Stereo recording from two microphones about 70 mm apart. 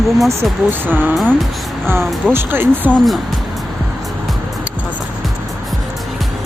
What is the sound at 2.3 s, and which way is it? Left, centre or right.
Speech, right.